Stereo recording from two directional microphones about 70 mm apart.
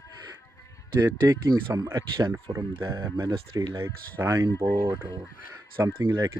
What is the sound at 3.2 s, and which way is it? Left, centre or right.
Speech, right.